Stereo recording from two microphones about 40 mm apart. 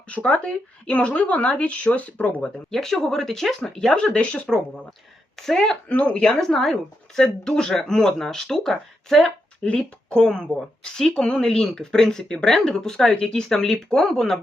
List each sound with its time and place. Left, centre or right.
0.1 s speech: left
2.6 s speech: centre
3.9 s speech: left
5.4 s speech: centre
5.9 s speech: left
6.2 s speech: centre
9.7 s speech: centre